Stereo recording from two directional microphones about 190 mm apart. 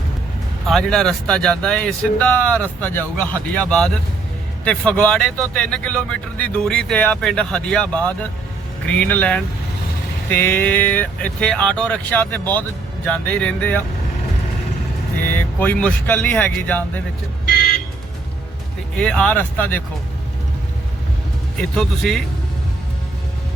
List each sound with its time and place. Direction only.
0.7 s speech: centre (ahead or behind)
15.3 s speech: 10° left (ahead or behind)
18.9 s speech: 5° left (ahead or behind)
21.6 s speech: 5° left (ahead or behind)